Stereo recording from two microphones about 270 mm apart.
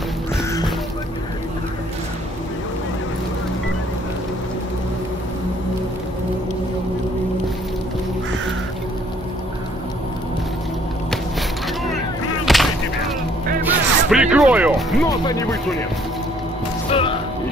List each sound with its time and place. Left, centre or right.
0.4 s music: centre
12.5 s a sound: centre
13.7 s music: centre
15.0 s speech: centre
16.9 s music: centre